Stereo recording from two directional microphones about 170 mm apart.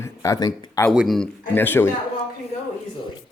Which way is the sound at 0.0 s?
20° left (ahead or behind).